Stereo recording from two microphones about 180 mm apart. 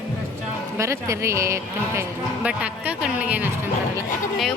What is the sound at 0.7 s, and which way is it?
Speech, 15° right (ahead or behind).